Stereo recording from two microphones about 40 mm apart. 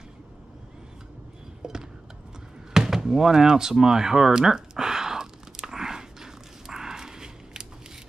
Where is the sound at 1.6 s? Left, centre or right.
Centre.